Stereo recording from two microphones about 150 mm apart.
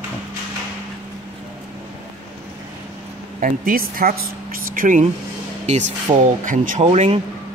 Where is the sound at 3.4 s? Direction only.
75° right (ahead or behind).